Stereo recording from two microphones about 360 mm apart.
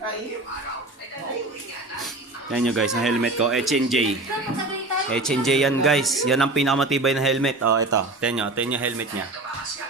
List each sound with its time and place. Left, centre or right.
2.5 s speech: centre
5.1 s speech: centre
7.6 s speech: right
8.2 s speech: centre